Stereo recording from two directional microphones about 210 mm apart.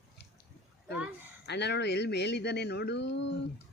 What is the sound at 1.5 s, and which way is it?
Speech, 55° left (ahead or behind).